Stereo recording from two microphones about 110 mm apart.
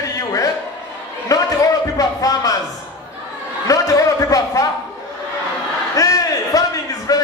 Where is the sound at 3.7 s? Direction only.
30° left (ahead or behind).